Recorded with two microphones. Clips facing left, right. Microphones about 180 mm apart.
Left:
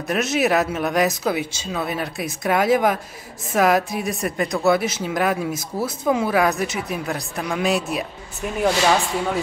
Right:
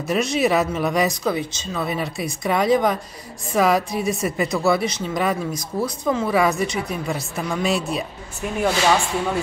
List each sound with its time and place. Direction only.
0.0 s speech: centre (ahead or behind)
5.5 s speech: 25° left (ahead or behind)
5.9 s speech: 5° left (ahead or behind)